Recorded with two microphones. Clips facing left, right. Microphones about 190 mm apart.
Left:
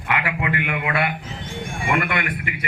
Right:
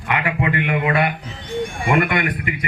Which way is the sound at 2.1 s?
30° right (ahead or behind).